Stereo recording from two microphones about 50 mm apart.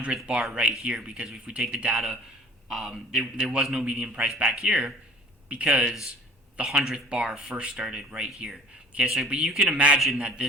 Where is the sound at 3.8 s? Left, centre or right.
Right.